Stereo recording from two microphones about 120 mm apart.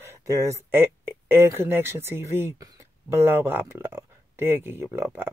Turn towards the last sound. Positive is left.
turn(degrees=-20)  # may be behind; listen again after turning